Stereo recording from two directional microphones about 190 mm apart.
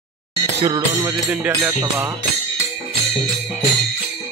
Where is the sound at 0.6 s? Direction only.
20° right (ahead or behind).